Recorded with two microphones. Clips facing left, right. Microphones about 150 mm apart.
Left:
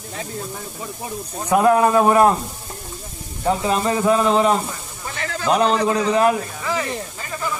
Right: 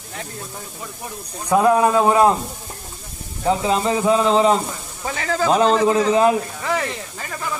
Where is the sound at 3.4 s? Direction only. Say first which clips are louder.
Right 1 dB; 10° right (ahead or behind).